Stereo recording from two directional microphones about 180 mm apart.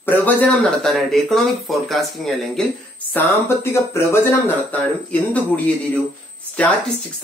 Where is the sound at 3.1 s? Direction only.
15° left (ahead or behind).